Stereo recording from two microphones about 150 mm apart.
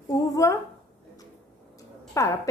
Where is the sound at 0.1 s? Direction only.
25° left (ahead or behind).